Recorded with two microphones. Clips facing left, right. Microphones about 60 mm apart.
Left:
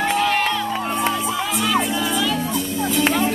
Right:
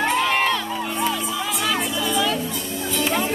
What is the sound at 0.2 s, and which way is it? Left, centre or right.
Crowd, centre.